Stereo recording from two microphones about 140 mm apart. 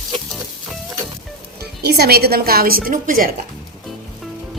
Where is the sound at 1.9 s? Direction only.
90° right.